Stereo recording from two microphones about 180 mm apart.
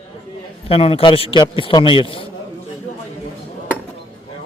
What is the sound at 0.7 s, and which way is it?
A man's voice, 30° left (ahead or behind).